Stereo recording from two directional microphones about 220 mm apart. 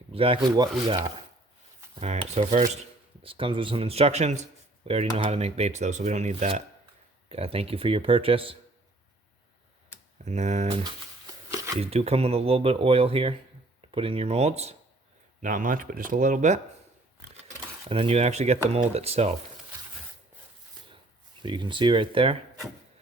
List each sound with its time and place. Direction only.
0.1 s speech: 25° right (ahead or behind)
2.0 s speech: 30° right (ahead or behind)
10.2 s speech: 30° right (ahead or behind)
10.8 s a sound: 15° right (ahead or behind)
11.8 s speech: 30° right (ahead or behind)
17.8 s speech: 25° right (ahead or behind)
21.4 s speech: 20° right (ahead or behind)